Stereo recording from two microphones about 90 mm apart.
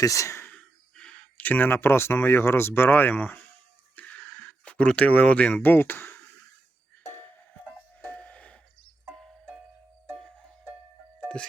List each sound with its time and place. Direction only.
0.0 s speech: 35° left (ahead or behind)
0.4 s speech: 15° left (ahead or behind)
3.9 s a sound: 15° left (ahead or behind)
7.1 s music: 20° left (ahead or behind); by 9.3 s 5° left (ahead or behind)
11.3 s music: 10° left (ahead or behind)